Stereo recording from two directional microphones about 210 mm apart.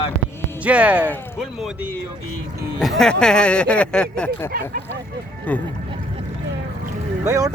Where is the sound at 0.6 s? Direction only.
5° right (ahead or behind).